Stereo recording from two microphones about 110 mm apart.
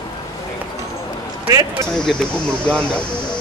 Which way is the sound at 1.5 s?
30° right (ahead or behind).